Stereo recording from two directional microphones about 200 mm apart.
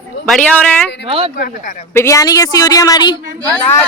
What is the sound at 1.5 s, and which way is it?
Speech, 40° left (ahead or behind).